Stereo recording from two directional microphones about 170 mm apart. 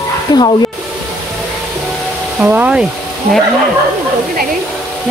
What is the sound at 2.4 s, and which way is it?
Speech, 10° right (ahead or behind).